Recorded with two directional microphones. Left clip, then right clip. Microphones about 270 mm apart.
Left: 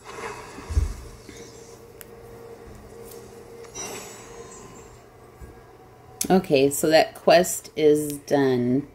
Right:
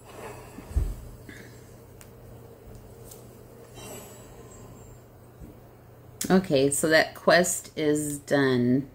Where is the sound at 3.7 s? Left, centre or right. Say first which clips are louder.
Left 8 dB; centre.